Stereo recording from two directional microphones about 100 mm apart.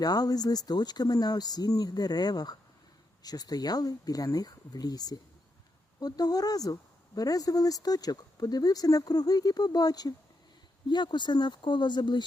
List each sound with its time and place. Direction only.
0.0 s speech: 40° left (ahead or behind)